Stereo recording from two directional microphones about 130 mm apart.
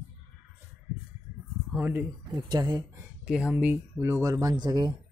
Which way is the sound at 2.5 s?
30° right (ahead or behind).